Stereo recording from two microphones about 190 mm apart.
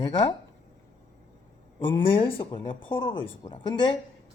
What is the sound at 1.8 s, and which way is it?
Speech, 25° left (ahead or behind).